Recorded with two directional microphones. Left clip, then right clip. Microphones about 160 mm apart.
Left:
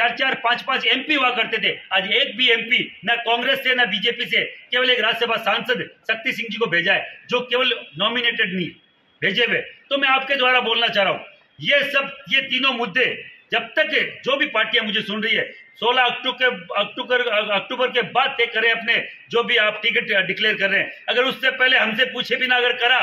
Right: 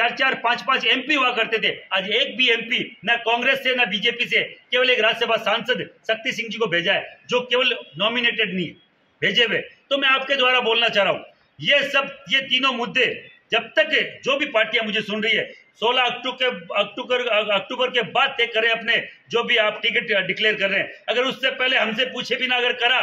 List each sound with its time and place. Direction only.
0.0 s a man's voice: 10° right (ahead or behind)